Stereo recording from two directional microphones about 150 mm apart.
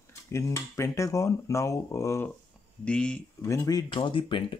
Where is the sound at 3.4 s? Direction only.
20° left (ahead or behind).